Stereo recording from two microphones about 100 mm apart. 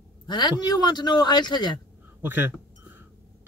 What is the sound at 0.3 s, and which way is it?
Speech, 50° left (ahead or behind).